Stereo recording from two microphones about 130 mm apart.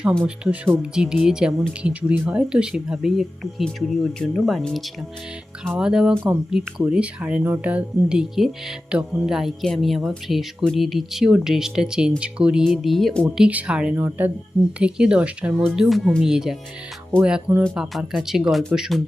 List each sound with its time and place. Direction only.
0.3 s speech: 10° right (ahead or behind)